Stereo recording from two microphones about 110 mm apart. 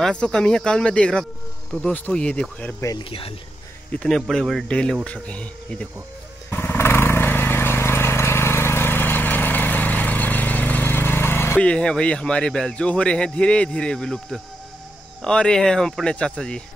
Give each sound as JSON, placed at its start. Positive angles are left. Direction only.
{"t": 0.0, "sound": "a man's voice", "side_deg": 5}
{"t": 3.0, "sound": "speech", "side_deg": 55}
{"t": 4.1, "sound": "a man's voice", "side_deg": 0}
{"t": 6.5, "sound": "vehicle", "side_deg": 20}
{"t": 11.6, "sound": "a man's voice", "side_deg": 10}